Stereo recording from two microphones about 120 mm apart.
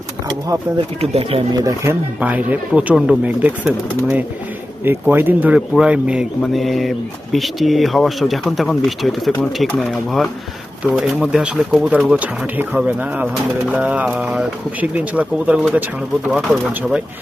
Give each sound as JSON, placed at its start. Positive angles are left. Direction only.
{"t": 0.3, "sound": "speech", "side_deg": -30}
{"t": 1.1, "sound": "speech", "side_deg": -50}
{"t": 1.5, "sound": "speech", "side_deg": -25}